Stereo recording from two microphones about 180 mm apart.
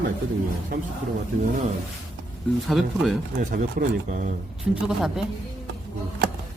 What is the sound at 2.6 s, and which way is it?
Speech, centre (ahead or behind).